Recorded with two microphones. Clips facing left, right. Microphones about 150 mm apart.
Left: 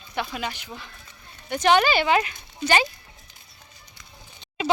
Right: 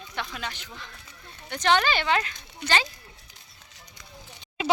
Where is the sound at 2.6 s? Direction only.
65° right (ahead or behind).